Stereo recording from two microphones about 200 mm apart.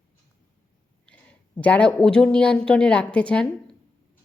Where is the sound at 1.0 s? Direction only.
5° left (ahead or behind).